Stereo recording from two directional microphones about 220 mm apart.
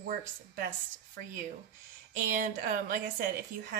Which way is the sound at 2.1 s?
40° right (ahead or behind).